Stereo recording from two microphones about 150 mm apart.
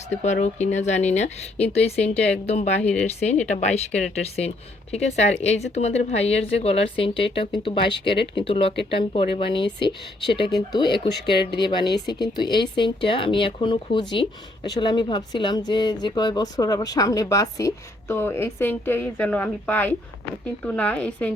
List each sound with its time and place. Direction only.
0.2 s a woman's voice: 50° left (ahead or behind); by 21.3 s 10° left (ahead or behind)